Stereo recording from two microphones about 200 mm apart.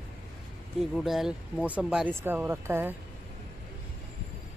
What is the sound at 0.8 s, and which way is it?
Speech, centre (ahead or behind).